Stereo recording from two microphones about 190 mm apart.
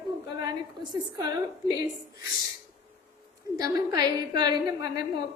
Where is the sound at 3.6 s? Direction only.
20° right (ahead or behind).